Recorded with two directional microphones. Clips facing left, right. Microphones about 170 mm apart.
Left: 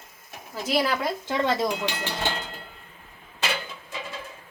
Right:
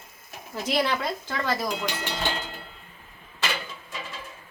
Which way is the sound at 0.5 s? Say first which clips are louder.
Left 1 dB; 5° left (ahead or behind).